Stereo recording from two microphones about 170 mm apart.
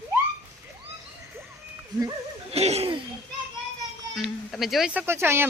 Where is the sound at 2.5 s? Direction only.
40° right (ahead or behind).